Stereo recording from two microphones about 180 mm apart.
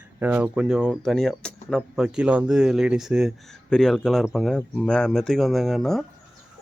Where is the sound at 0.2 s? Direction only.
10° right (ahead or behind).